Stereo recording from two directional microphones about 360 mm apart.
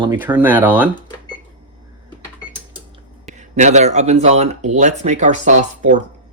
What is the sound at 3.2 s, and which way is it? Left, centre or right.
A man's voice, centre.